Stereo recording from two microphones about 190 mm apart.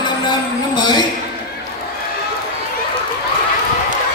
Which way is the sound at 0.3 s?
20° left (ahead or behind).